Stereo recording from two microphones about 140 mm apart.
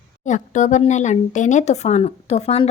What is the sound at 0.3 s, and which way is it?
Speech, 60° left (ahead or behind).